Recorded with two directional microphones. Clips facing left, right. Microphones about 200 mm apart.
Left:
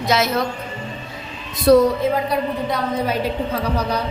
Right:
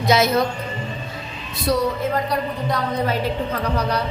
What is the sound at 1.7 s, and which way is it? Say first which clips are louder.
Speech: left 9 dB; 60° left (ahead or behind).